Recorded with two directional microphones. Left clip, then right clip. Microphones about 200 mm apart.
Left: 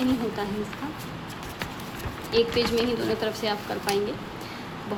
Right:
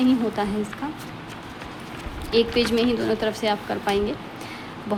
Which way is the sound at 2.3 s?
25° right (ahead or behind).